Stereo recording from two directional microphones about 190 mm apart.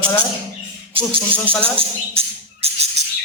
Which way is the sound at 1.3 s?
5° left (ahead or behind).